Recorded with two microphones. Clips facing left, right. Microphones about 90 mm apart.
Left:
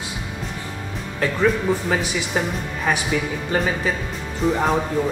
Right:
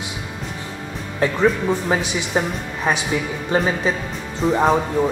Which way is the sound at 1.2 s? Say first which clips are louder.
Right 2 dB; 20° right (ahead or behind).